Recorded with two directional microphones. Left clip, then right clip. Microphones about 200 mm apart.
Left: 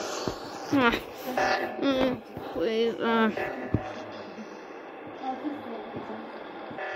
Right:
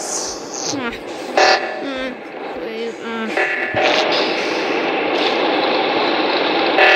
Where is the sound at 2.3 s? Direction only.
40° right (ahead or behind).